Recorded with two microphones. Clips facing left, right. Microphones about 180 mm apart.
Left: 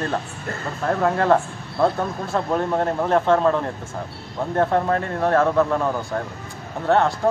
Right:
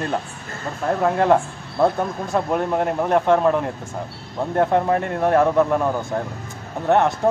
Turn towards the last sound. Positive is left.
turn(degrees=-15)  # may be behind; listen again after turning